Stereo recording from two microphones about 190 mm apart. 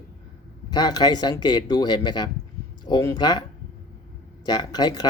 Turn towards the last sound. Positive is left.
turn(degrees=20)  # may be behind; listen again after turning